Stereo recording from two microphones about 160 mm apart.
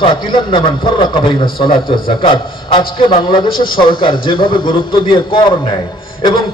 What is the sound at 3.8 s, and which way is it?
A man's voice, 30° left (ahead or behind).